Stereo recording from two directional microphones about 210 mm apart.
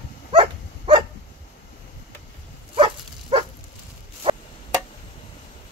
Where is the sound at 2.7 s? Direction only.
25° right (ahead or behind).